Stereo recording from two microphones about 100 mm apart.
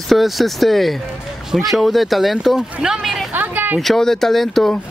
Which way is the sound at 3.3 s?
15° right (ahead or behind).